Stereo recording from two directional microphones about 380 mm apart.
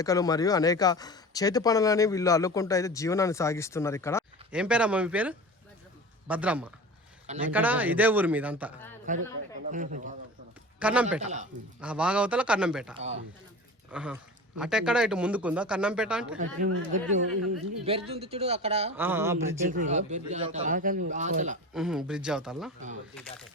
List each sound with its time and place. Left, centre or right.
0.0 s speech: centre
4.5 s a man's voice: centre
9.1 s speech: centre
10.8 s a man's voice: centre
11.2 s speech: centre
11.8 s a man's voice: centre
16.4 s speech: centre
18.9 s speech: centre
19.6 s speech: centre
21.7 s a man's voice: centre